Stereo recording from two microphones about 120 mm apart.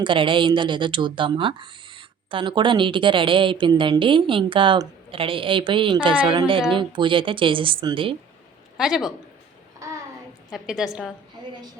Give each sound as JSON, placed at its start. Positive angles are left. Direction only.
{"t": 0.0, "sound": "speech", "side_deg": -45}
{"t": 8.8, "sound": "a woman's voice", "side_deg": 0}
{"t": 10.5, "sound": "a woman's voice", "side_deg": -5}